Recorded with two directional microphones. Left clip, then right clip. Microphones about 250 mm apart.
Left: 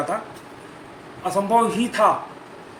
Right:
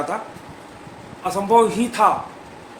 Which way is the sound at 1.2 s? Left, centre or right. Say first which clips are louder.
Right 3 dB; centre.